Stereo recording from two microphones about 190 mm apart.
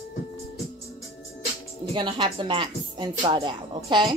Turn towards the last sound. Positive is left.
turn(degrees=-25)  # may be behind; listen again after turning